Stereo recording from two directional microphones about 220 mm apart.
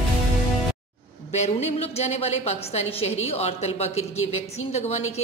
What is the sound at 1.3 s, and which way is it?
A woman's voice, 30° left (ahead or behind).